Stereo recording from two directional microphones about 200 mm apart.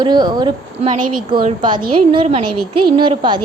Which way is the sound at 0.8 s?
45° right (ahead or behind).